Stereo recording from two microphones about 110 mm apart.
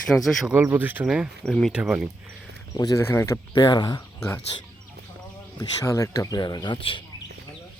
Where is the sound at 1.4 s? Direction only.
5° left (ahead or behind).